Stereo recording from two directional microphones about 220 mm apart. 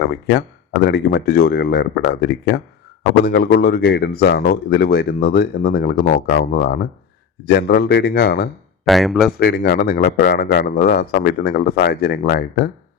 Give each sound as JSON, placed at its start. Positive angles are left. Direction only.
{"t": 0.0, "sound": "speech", "side_deg": 45}
{"t": 8.9, "sound": "speech", "side_deg": 0}
{"t": 9.4, "sound": "speech", "side_deg": 45}